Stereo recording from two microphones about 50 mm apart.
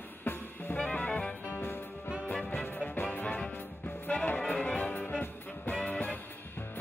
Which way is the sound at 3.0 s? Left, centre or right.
Left.